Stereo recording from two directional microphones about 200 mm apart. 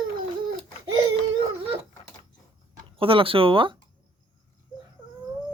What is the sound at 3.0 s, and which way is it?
Speech, 25° right (ahead or behind).